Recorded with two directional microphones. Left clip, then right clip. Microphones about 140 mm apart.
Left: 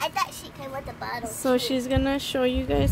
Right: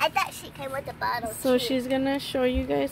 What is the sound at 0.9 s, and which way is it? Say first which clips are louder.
Speech: right 7 dB; 20° right (ahead or behind).